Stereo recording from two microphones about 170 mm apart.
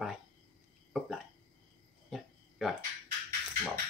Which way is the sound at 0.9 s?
5° right (ahead or behind).